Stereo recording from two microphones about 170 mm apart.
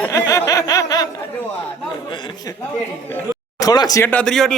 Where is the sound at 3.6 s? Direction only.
20° left (ahead or behind).